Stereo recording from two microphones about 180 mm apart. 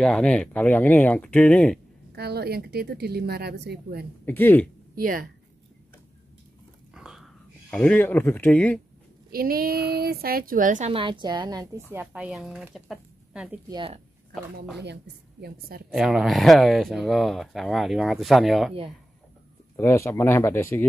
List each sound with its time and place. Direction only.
0.0 s speech: 5° left (ahead or behind)
2.1 s speech: 60° right (ahead or behind)
4.3 s speech: 10° left (ahead or behind)
4.9 s speech: 50° right (ahead or behind)
6.9 s a sound: 5° right (ahead or behind)
7.7 s speech: 10° left (ahead or behind)
9.3 s speech: 55° right (ahead or behind)
10.9 s a woman's voice: 30° right (ahead or behind)
12.0 s speech: 5° right (ahead or behind)
13.7 s a woman's voice: 25° right (ahead or behind)
15.4 s speech: 60° right (ahead or behind)
15.9 s speech: centre (ahead or behind)
19.8 s speech: 15° left (ahead or behind)